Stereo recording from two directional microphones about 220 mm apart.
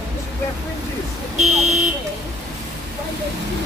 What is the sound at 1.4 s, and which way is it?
Buzzer, 30° right (ahead or behind).